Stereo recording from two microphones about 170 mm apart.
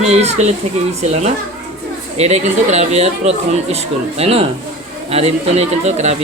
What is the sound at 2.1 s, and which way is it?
Speech, 40° right (ahead or behind).